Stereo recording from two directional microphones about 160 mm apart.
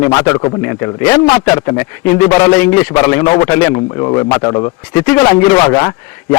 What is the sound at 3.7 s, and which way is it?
A man's voice, 25° left (ahead or behind).